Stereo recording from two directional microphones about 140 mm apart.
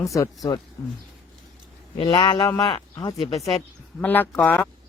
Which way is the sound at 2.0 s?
35° left (ahead or behind).